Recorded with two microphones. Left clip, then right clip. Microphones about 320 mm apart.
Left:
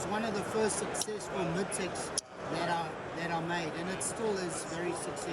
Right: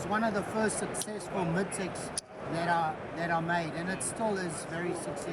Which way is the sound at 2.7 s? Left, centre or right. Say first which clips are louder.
Right 5 dB; centre.